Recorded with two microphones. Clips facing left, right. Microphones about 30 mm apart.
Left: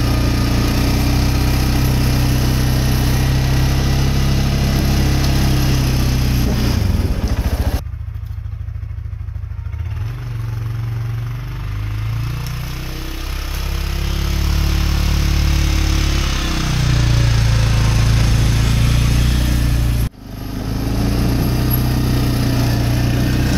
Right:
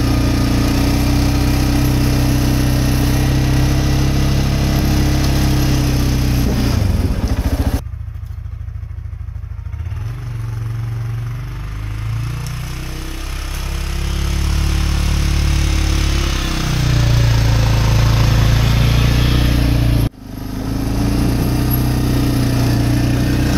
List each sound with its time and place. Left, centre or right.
0.0 s vehicle: centre
12.3 s a sound: centre
13.7 s vehicle: centre; by 20.1 s right
20.4 s vehicle: centre